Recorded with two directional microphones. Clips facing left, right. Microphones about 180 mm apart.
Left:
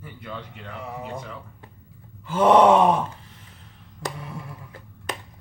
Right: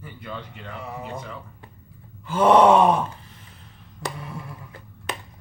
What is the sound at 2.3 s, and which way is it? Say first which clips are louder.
Groan: even; 20° left (ahead or behind).